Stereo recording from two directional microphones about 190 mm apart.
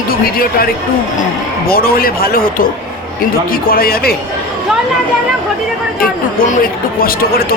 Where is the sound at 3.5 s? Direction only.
50° left (ahead or behind).